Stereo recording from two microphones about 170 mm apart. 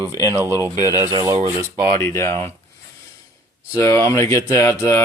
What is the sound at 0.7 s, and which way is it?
Speech, 20° left (ahead or behind).